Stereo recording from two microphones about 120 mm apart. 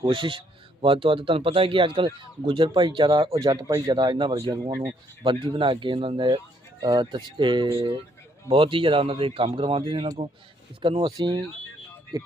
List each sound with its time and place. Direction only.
0.0 s a man's voice: 45° right (ahead or behind)